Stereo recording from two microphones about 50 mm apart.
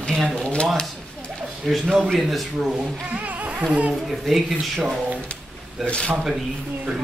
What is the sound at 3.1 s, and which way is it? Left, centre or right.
Music, right.